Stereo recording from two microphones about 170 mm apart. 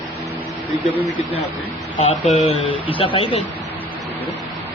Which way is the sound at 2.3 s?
35° left (ahead or behind).